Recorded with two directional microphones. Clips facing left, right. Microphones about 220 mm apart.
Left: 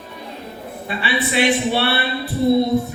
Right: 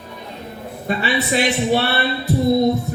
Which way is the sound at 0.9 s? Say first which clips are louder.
Right 3 dB; 40° right (ahead or behind).